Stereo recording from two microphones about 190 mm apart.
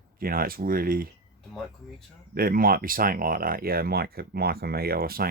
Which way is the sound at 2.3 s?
50° right (ahead or behind).